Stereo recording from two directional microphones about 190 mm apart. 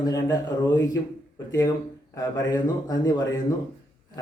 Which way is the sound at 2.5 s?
20° left (ahead or behind).